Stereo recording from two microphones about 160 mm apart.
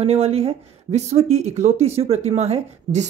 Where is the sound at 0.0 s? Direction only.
40° right (ahead or behind).